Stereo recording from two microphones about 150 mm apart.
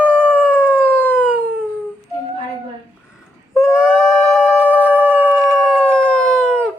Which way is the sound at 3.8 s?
5° right (ahead or behind).